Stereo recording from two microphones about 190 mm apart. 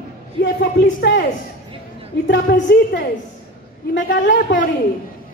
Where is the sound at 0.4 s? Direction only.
65° left (ahead or behind).